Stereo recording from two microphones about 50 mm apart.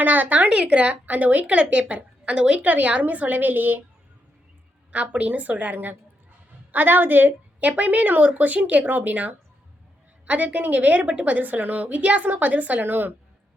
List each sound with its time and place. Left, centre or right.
0.0 s speech: right
4.9 s a woman's voice: right
7.7 s speech: right